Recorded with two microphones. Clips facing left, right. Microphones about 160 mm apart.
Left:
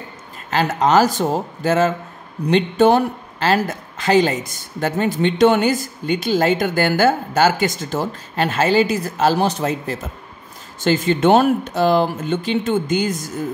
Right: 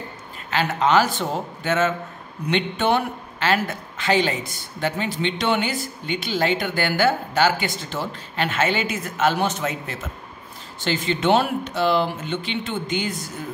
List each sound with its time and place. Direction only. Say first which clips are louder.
0.5 s a woman's voice: left 3 dB; 40° left (ahead or behind)
10.8 s a woman's voice: left 7 dB; 45° left (ahead or behind)